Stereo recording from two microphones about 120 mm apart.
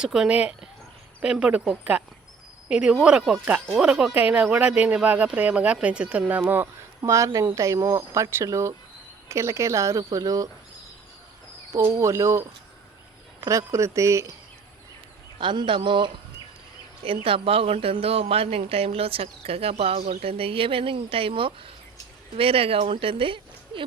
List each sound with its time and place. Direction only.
0.0 s speech: 5° right (ahead or behind); by 10.5 s 30° right (ahead or behind)
11.9 s speech: 25° right (ahead or behind)
15.4 s speech: 40° right (ahead or behind)